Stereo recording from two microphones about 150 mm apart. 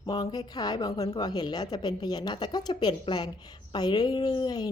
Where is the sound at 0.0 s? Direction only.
25° left (ahead or behind).